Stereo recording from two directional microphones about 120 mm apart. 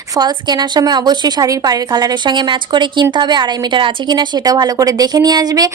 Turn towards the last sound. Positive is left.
turn(degrees=-35)  # may be behind; listen again after turning